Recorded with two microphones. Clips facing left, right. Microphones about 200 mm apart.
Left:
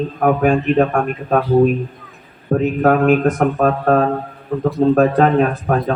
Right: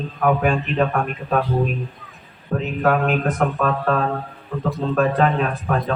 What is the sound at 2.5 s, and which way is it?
Speech, 45° left (ahead or behind).